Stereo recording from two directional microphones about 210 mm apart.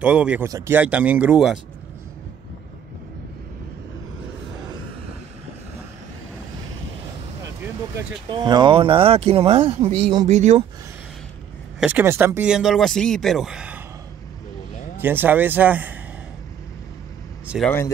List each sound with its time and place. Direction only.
0.0 s speech: 5° right (ahead or behind)
8.3 s speech: 20° right (ahead or behind)
11.8 s speech: 10° right (ahead or behind)
15.0 s speech: 10° right (ahead or behind)
17.6 s speech: 10° left (ahead or behind)